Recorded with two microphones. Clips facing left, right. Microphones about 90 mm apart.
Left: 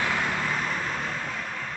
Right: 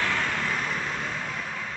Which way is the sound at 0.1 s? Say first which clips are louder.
Left 1 dB; 5° left (ahead or behind).